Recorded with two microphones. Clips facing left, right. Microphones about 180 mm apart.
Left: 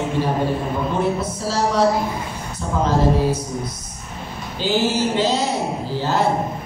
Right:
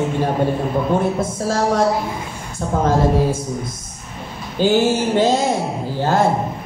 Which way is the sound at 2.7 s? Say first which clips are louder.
Right 3 dB; 50° right (ahead or behind).